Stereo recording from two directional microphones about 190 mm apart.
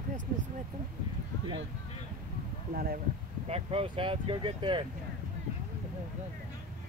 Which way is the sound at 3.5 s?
30° right (ahead or behind).